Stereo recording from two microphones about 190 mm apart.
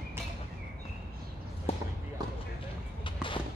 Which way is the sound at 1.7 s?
30° left (ahead or behind).